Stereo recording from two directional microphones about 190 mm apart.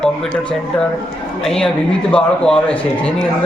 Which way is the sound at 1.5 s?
5° left (ahead or behind).